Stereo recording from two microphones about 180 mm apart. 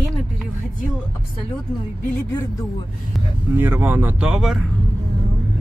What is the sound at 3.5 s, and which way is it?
Speech, 10° right (ahead or behind).